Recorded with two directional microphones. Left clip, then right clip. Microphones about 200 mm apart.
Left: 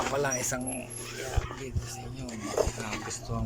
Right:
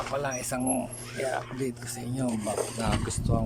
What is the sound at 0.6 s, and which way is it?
Speech, 25° right (ahead or behind).